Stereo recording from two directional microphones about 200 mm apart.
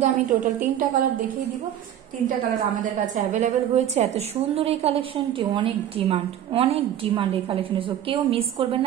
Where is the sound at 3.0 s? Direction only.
40° right (ahead or behind).